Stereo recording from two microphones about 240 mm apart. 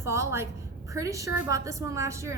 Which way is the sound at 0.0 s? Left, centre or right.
Centre.